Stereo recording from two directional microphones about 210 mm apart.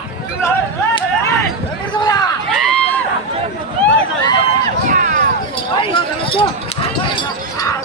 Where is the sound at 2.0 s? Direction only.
20° left (ahead or behind).